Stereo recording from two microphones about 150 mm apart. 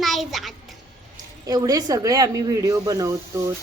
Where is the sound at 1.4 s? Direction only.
25° right (ahead or behind).